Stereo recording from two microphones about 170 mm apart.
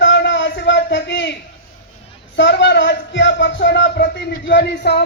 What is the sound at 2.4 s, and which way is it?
Speech, 90° left.